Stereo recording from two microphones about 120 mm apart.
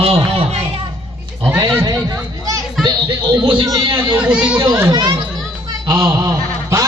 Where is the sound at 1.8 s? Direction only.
30° right (ahead or behind).